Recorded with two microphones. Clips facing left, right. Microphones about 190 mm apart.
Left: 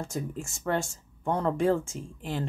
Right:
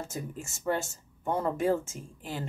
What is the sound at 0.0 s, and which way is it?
Speech, 5° right (ahead or behind).